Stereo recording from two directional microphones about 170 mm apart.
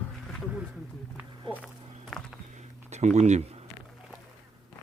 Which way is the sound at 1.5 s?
30° right (ahead or behind).